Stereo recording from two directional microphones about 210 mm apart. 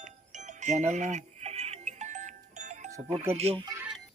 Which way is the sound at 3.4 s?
25° right (ahead or behind).